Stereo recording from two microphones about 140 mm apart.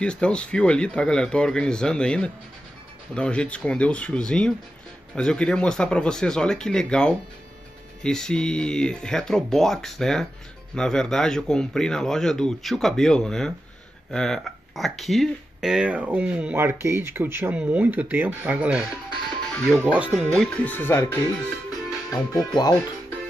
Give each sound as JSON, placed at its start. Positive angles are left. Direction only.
{"t": 0.0, "sound": "a man's voice", "side_deg": 5}
{"t": 19.5, "sound": "speech", "side_deg": 5}
{"t": 19.8, "sound": "speech", "side_deg": -10}
{"t": 20.2, "sound": "speech", "side_deg": 5}
{"t": 22.1, "sound": "speech", "side_deg": 30}